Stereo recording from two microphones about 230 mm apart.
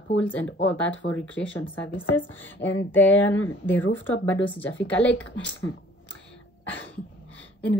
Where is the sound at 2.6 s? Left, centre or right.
Left.